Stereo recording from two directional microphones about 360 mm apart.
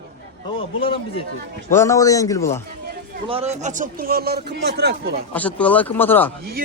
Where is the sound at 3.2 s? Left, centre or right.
Centre.